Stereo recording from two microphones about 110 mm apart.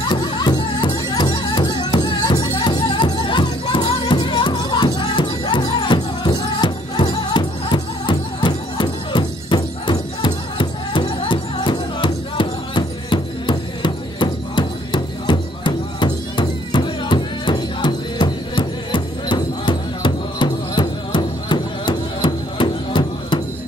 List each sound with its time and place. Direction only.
0.1 s music: 45° left (ahead or behind)